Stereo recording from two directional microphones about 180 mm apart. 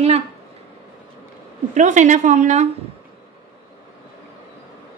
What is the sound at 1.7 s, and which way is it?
Speech, 40° right (ahead or behind).